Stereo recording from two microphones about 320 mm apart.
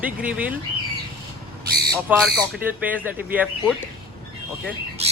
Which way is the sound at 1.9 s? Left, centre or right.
Centre.